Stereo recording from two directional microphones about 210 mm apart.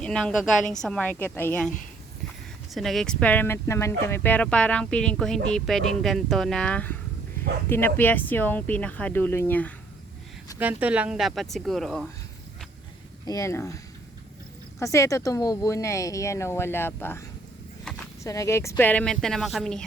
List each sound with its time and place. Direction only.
0.0 s speech: 5° left (ahead or behind)
2.7 s speech: centre (ahead or behind)
10.6 s speech: 5° right (ahead or behind)
13.2 s speech: 15° left (ahead or behind)
14.8 s speech: 15° left (ahead or behind)